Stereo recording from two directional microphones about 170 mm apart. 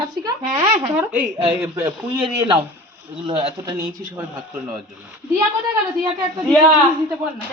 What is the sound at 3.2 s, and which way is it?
Speech, 25° right (ahead or behind).